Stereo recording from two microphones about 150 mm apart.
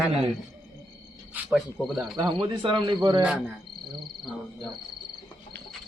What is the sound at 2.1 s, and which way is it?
Speech, 30° right (ahead or behind).